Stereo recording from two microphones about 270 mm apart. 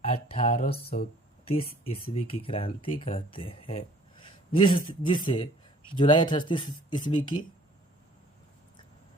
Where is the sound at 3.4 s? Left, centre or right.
Centre.